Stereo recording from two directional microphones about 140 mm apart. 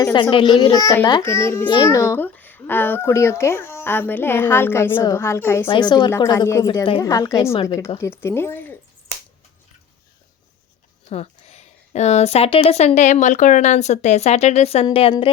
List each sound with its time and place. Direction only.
0.0 s a child's voice: 30° left (ahead or behind)
0.6 s a woman's voice: 25° left (ahead or behind)
5.7 s a child's voice: 35° left (ahead or behind)
6.1 s a woman's voice: 20° left (ahead or behind)
11.1 s speech: 50° left (ahead or behind)